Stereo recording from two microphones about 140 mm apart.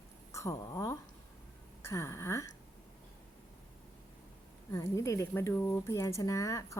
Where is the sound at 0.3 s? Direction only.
20° left (ahead or behind).